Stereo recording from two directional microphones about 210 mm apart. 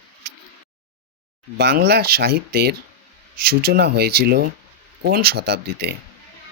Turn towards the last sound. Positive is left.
turn(degrees=-50)  # may be behind; listen again after turning